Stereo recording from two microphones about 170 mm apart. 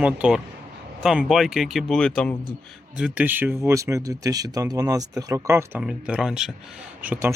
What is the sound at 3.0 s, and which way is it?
Speech, 5° right (ahead or behind).